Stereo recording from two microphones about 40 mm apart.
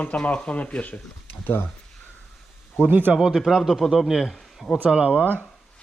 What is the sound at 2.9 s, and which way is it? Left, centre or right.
Speech, right.